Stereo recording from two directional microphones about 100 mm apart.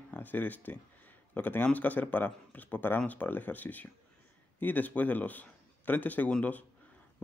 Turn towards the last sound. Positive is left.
turn(degrees=15)  # may be behind; listen again after turning